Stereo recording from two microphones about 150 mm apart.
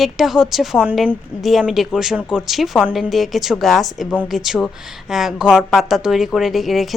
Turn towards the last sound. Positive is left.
turn(degrees=0)  # may be behind; listen again after turning